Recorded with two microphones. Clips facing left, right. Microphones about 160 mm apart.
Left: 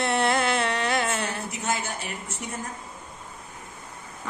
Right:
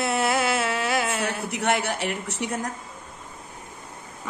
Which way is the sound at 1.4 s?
70° right (ahead or behind).